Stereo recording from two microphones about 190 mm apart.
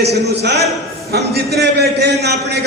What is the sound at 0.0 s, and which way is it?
A man's voice, 60° right (ahead or behind).